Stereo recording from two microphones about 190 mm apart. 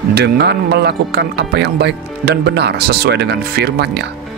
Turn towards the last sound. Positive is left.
turn(degrees=-60)  # may be behind; listen again after turning